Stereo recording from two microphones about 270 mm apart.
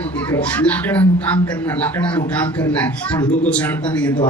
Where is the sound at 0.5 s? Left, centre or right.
Centre.